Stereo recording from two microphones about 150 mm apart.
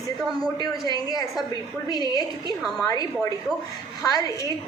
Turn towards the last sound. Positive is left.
turn(degrees=25)  # may be behind; listen again after turning